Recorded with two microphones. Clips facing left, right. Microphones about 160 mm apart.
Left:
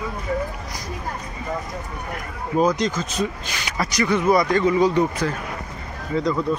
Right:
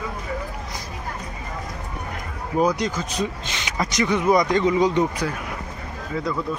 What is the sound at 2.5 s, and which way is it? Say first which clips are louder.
Speech: left 1 dB; 10° right (ahead or behind).